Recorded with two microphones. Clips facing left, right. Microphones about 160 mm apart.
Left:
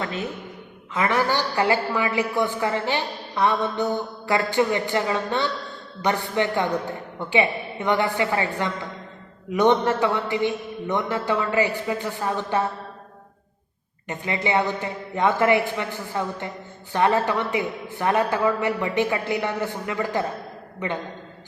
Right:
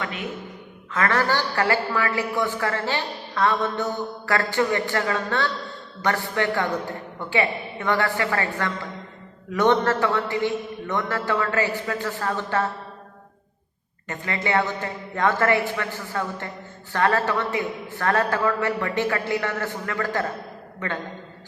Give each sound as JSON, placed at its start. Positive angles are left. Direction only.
{"t": 0.0, "sound": "a man's voice", "side_deg": 30}
{"t": 0.9, "sound": "a woman's voice", "side_deg": 15}
{"t": 14.1, "sound": "a woman's voice", "side_deg": 20}